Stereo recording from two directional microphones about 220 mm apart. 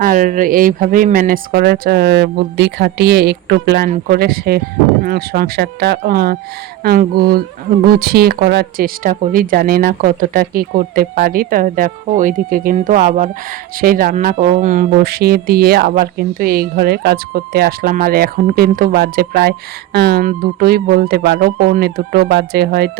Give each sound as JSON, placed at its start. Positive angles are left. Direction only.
{"t": 0.0, "sound": "speech", "side_deg": -40}